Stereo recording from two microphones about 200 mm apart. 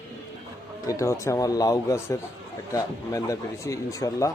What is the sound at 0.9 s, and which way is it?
Speech, 15° left (ahead or behind).